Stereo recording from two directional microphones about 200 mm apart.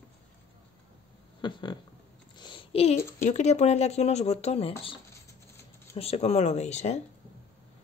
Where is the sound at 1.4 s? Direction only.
25° left (ahead or behind).